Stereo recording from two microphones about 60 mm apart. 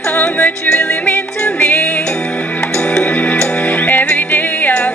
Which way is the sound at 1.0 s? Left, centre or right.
Left.